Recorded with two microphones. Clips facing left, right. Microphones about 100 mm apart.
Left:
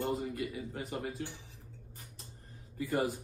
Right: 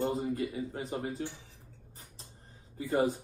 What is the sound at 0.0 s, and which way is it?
Speech, 30° right (ahead or behind).